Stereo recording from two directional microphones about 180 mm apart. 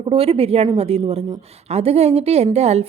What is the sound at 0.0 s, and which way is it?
A woman's voice, 30° right (ahead or behind).